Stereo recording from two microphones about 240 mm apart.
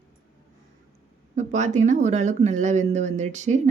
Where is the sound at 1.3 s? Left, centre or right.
Right.